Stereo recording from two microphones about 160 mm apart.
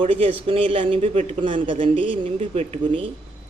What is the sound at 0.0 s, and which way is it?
Speech, 35° right (ahead or behind).